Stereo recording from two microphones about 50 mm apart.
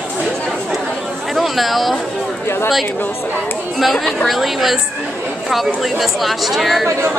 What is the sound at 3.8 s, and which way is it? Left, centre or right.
Speech, centre.